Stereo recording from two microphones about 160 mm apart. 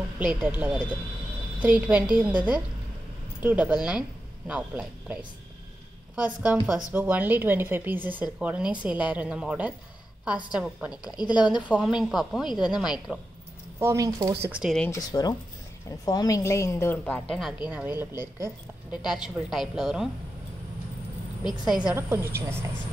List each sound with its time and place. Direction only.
0.2 s a woman's voice: 10° right (ahead or behind)
11.1 s speech: 25° left (ahead or behind)
11.6 s a woman's voice: 5° right (ahead or behind)
13.7 s speech: 20° right (ahead or behind)
14.4 s a woman's voice: 5° right (ahead or behind)
14.9 s a woman's voice: 25° left (ahead or behind); by 17.6 s centre (ahead or behind)
17.6 s a woman's voice: 10° right (ahead or behind)
21.5 s a woman's voice: 5° right (ahead or behind)